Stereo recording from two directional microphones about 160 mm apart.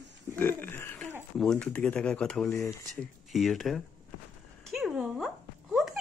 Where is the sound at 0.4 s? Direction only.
15° left (ahead or behind).